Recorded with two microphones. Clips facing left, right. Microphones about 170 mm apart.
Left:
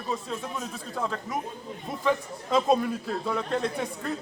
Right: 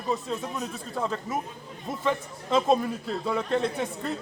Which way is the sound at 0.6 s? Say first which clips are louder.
Right 1 dB; centre (ahead or behind).